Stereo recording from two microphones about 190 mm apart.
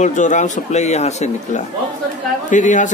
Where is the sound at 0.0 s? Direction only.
40° left (ahead or behind).